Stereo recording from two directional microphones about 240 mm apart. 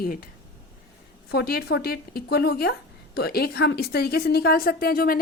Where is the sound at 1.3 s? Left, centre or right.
Left.